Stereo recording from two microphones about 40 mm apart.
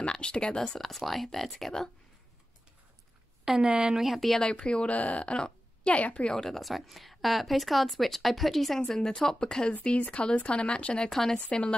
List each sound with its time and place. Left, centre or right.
0.0 s speech: left
0.7 s speech: centre
3.6 s speech: right
4.0 s speech: centre
4.4 s speech: left
4.9 s speech: left
6.3 s speech: centre
6.6 s speech: centre
9.8 s speech: left
11.1 s speech: centre
11.4 s speech: left